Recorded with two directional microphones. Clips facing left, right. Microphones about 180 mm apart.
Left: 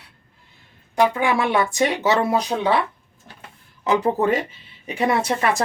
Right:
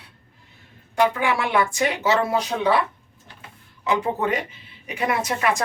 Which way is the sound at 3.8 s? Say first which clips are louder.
Left 4 dB; 35° left (ahead or behind).